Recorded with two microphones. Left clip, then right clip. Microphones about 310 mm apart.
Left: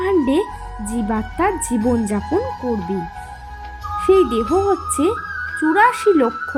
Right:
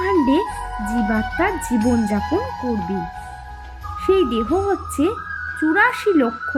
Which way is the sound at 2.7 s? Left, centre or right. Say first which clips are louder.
Left 1 dB; centre.